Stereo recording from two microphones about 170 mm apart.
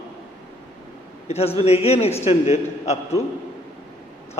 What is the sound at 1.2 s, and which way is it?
A man's voice, 35° left (ahead or behind).